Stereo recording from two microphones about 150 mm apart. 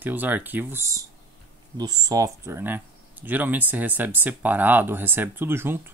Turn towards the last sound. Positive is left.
turn(degrees=-15)  # may be behind; listen again after turning